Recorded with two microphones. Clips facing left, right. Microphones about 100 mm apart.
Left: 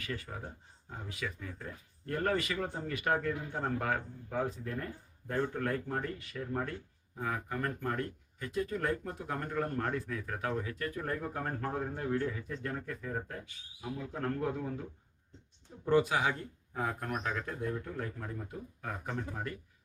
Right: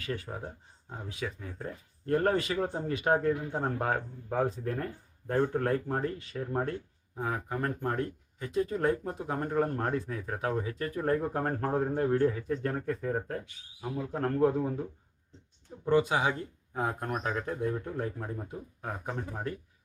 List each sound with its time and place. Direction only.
0.0 s speech: 30° right (ahead or behind)
15.9 s speech: 20° right (ahead or behind)